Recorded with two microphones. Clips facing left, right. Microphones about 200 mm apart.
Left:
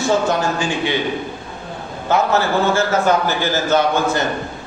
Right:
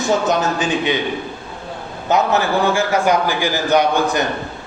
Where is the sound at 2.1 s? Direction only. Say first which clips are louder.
Even; 15° right (ahead or behind).